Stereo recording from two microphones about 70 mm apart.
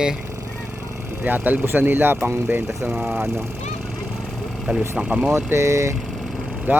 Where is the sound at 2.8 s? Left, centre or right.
Centre.